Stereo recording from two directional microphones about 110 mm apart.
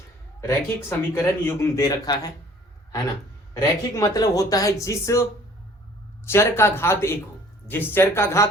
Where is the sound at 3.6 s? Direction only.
35° left (ahead or behind).